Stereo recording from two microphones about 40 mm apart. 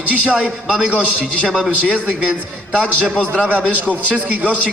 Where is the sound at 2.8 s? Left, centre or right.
Left.